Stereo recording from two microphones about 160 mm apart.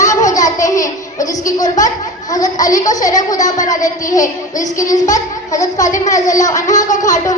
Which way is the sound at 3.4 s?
50° left (ahead or behind).